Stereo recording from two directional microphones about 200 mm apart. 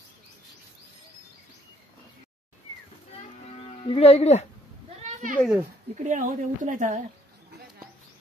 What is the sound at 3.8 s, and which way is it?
Speech, 30° left (ahead or behind).